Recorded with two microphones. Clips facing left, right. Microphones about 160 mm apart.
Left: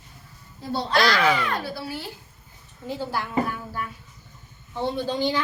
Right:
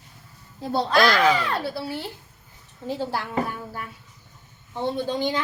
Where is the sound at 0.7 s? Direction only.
50° right (ahead or behind).